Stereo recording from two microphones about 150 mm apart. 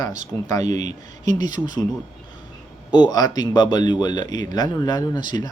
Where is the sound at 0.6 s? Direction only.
50° right (ahead or behind).